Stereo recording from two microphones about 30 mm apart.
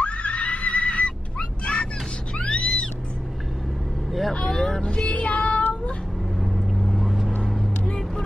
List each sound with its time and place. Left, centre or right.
0.0 s neigh: left
2.3 s music: left
4.5 s vehicle: centre
4.8 s music: left
5.1 s child singing: left
6.4 s vehicle: centre